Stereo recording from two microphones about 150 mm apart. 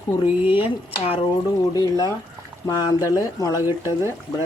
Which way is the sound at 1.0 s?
40° left (ahead or behind).